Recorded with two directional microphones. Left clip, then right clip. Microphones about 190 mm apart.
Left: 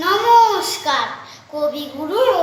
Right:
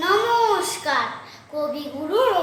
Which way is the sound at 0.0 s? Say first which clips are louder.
Left 6 dB; 15° right (ahead or behind).